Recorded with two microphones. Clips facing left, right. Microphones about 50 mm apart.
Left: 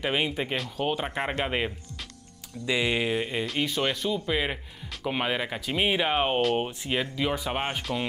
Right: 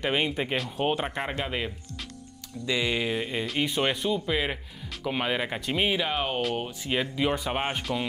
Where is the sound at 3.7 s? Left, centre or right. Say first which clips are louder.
Right 1 dB; centre.